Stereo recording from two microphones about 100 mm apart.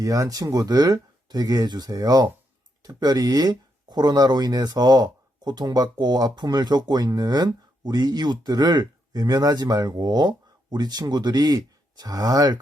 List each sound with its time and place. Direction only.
0.0 s speech: 35° right (ahead or behind)